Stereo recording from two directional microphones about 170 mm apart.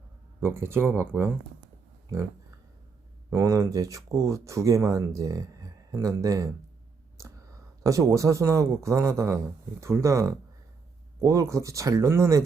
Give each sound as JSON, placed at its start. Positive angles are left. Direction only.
{"t": 0.3, "sound": "a man's voice", "side_deg": -15}
{"t": 3.2, "sound": "speech", "side_deg": -15}
{"t": 7.2, "sound": "whispering", "side_deg": -15}
{"t": 7.9, "sound": "a man's voice", "side_deg": -20}